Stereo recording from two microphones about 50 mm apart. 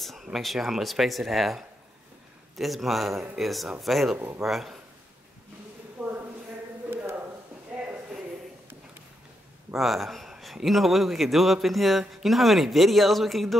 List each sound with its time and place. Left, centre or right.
0.0 s speech: centre
6.0 s a sound: right
9.8 s speech: centre